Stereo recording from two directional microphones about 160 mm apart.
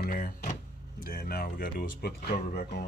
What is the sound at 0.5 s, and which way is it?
Speech, 60° left (ahead or behind).